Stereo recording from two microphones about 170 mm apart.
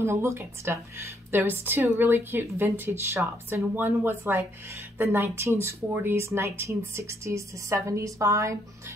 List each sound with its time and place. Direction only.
0.0 s speech: 15° right (ahead or behind)